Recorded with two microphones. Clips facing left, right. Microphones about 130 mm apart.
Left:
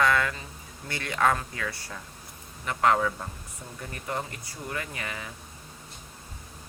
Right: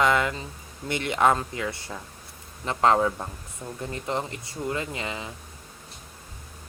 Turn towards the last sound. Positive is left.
turn(degrees=-20)  # may be behind; listen again after turning